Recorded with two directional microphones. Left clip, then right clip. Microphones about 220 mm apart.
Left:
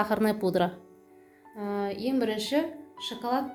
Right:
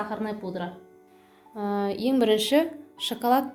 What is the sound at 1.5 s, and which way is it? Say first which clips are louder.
A woman's voice: right 4 dB; 30° right (ahead or behind).